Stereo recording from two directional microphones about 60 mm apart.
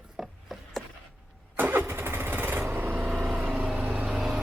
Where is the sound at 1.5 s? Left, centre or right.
Right.